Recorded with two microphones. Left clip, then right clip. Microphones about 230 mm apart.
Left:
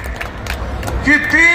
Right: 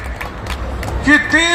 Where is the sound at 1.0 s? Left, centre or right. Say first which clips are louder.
Left 1 dB; right.